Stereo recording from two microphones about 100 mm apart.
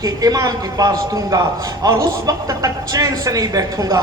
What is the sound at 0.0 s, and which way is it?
A man's voice, 40° right (ahead or behind).